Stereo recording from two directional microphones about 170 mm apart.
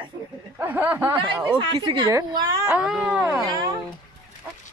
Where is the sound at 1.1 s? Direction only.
25° right (ahead or behind).